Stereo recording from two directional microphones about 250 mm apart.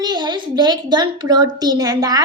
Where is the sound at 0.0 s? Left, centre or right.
Centre.